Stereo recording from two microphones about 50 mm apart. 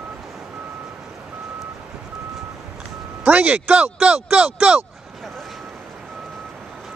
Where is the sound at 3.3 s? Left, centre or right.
Right.